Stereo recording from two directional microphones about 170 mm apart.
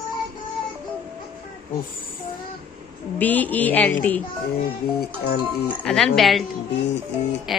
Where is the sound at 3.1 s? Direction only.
10° left (ahead or behind).